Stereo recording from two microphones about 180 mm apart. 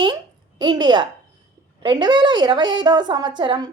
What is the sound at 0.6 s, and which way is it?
A woman's voice, 25° right (ahead or behind).